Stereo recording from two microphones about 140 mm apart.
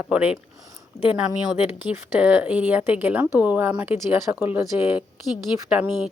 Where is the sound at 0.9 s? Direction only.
55° left (ahead or behind).